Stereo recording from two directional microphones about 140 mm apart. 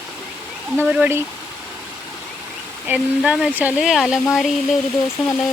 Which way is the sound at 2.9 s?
5° right (ahead or behind).